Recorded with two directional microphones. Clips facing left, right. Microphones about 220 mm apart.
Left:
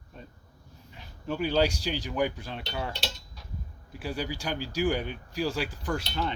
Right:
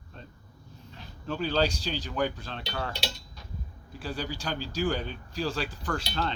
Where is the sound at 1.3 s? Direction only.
15° left (ahead or behind).